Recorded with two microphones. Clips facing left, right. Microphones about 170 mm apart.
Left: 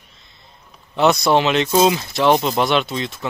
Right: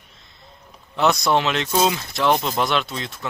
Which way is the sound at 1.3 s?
5° left (ahead or behind).